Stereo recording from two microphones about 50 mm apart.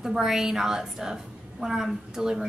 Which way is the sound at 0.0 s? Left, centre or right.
Centre.